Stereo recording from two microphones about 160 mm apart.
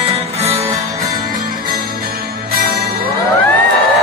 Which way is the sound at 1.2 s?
65° right (ahead or behind).